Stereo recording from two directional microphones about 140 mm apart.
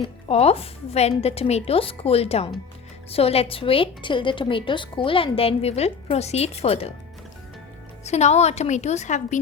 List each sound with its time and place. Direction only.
0.0 s a woman's voice: 45° left (ahead or behind)
8.0 s a woman's voice: 50° left (ahead or behind)